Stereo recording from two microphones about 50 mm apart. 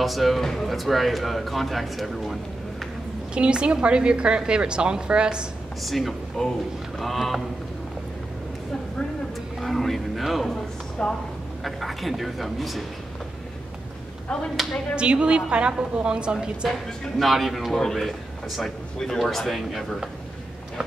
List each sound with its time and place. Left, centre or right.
0.0 s speech: centre
3.3 s a woman's voice: centre
5.8 s speech: centre
9.6 s a sound: centre
11.0 s a woman's voice: centre
11.6 s speech: centre
15.0 s a woman's voice: right
17.2 s speech: centre